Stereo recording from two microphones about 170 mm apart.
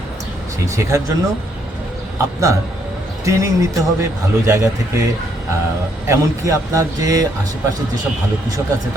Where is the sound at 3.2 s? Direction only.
20° right (ahead or behind).